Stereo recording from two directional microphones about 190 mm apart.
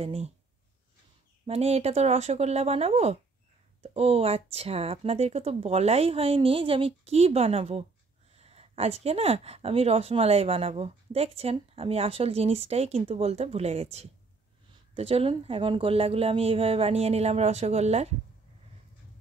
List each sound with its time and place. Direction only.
0.0 s speech: 35° right (ahead or behind)
1.4 s speech: 35° right (ahead or behind)